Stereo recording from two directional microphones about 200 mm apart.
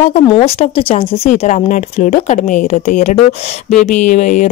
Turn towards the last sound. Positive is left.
turn(degrees=35)  # may be behind; listen again after turning